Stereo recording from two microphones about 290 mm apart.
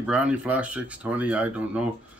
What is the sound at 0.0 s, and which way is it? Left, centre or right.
Speech, centre.